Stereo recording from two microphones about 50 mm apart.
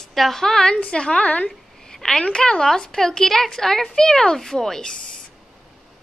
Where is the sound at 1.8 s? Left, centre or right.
Centre.